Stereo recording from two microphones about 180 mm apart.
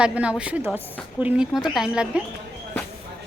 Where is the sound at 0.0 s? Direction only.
5° right (ahead or behind).